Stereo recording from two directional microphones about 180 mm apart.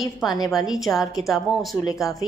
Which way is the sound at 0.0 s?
Centre (ahead or behind).